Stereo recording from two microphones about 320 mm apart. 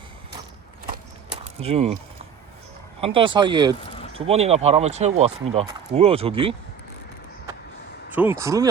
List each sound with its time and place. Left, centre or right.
1.6 s speech: centre
3.0 s speech: centre
3.8 s a sound: centre
4.1 s speech: centre
8.1 s speech: centre